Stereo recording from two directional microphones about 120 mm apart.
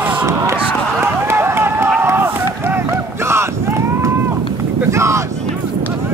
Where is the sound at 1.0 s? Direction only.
20° right (ahead or behind).